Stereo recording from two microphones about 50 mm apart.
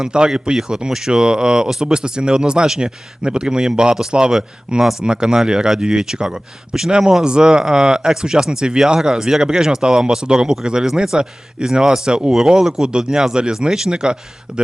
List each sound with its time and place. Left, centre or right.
0.0 s speech: centre